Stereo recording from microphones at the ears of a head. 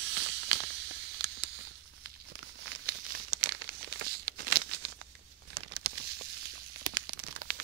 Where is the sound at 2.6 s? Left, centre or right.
Right.